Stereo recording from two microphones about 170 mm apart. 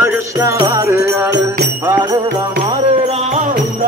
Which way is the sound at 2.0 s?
20° right (ahead or behind).